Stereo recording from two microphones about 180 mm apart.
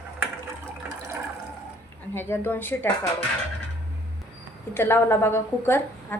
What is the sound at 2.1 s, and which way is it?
Speech, 10° left (ahead or behind).